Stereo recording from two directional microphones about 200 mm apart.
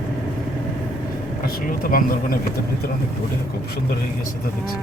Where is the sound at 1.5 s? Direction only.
45° left (ahead or behind).